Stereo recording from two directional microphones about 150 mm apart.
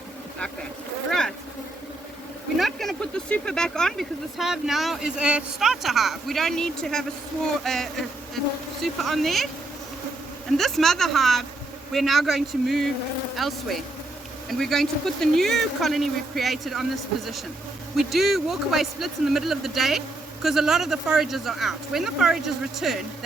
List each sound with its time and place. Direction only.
2.6 s speech: centre (ahead or behind)
10.6 s speech: centre (ahead or behind)